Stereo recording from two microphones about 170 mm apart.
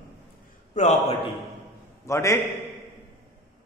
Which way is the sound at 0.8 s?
45° left (ahead or behind).